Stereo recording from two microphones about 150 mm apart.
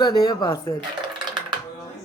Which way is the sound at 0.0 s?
25° left (ahead or behind).